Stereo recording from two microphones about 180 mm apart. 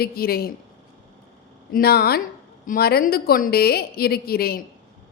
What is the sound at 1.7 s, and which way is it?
A woman's voice, 60° left (ahead or behind).